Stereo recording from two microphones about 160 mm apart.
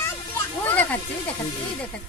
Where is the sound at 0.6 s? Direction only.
10° left (ahead or behind).